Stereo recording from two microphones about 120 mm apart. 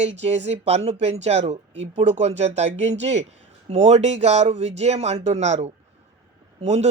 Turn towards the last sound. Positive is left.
turn(degrees=-65)  # may be behind; listen again after turning